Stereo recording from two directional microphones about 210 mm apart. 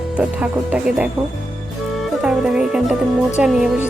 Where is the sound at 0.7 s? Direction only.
5° right (ahead or behind).